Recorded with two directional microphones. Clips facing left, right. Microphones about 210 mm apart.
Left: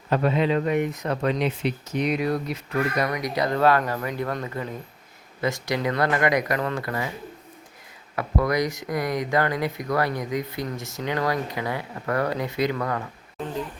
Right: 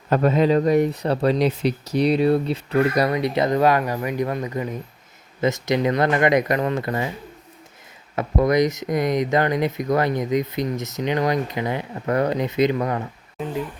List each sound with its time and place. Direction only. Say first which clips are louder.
0.1 s speech: right 4 dB; 45° right (ahead or behind); by 7.1 s 25° right (ahead or behind)
8.1 s speech: right 5 dB; 20° right (ahead or behind)